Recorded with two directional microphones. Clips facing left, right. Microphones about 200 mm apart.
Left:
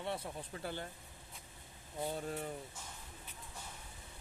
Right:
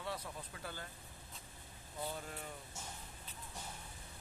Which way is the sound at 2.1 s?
35° left (ahead or behind).